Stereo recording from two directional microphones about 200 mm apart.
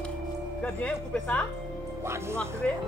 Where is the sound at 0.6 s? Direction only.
5° left (ahead or behind).